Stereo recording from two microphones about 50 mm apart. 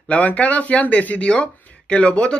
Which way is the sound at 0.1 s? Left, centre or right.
Left.